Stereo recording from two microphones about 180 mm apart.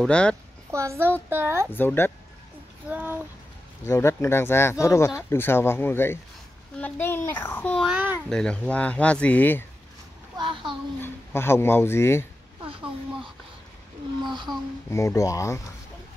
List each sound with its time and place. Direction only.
0.0 s a woman's voice: 5° left (ahead or behind)
0.7 s a child's voice: 15° right (ahead or behind)
1.7 s speech: 10° left (ahead or behind)
2.9 s speech: 10° right (ahead or behind)
3.8 s speech: 15° left (ahead or behind); by 8.2 s 5° right (ahead or behind)
8.3 s speech: 5° left (ahead or behind)
10.3 s a child's voice: 25° right (ahead or behind)
11.0 s speech: 15° left (ahead or behind)
14.9 s speech: 15° left (ahead or behind)